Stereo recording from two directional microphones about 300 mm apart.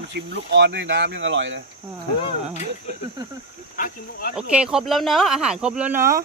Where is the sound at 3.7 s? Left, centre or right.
Left.